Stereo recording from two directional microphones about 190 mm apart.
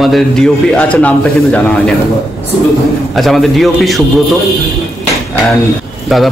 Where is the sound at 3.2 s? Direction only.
Centre (ahead or behind).